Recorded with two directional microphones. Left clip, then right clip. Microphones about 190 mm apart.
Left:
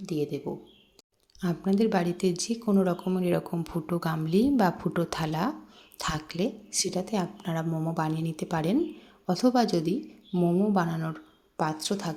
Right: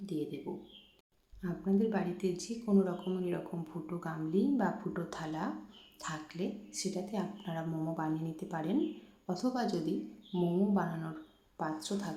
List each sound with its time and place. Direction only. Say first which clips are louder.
0.0 s speech: left 8 dB; 40° left (ahead or behind)
1.4 s a woman's voice: left 7 dB; 40° left (ahead or behind)